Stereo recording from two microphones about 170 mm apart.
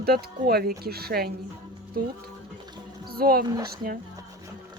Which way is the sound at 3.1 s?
60° right (ahead or behind).